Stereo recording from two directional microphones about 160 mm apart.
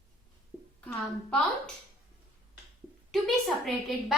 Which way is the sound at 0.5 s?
5° right (ahead or behind).